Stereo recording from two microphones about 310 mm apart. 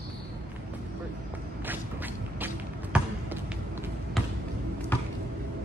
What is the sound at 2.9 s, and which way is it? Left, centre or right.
Basketball bounce, centre.